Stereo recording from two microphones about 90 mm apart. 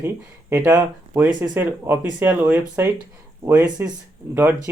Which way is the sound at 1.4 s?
20° right (ahead or behind).